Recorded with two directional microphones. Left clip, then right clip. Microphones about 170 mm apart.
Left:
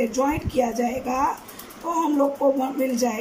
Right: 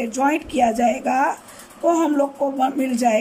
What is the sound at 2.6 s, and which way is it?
Speech, 65° right (ahead or behind).